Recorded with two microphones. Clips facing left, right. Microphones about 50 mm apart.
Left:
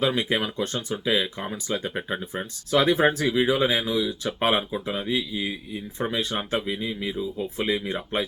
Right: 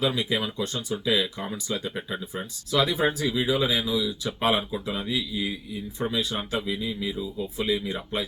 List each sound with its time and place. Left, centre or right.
0.0 s speech: left
1.0 s speech: left
6.0 s speech: left